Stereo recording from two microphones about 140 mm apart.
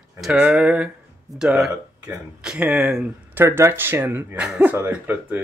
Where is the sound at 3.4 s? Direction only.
15° right (ahead or behind).